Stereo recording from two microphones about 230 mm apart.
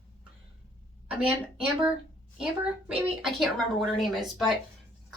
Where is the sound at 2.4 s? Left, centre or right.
Centre.